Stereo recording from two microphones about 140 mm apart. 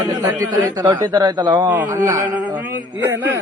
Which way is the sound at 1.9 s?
20° right (ahead or behind).